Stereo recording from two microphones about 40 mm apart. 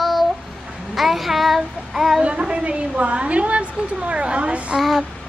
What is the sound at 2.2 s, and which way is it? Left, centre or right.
A woman's voice, right.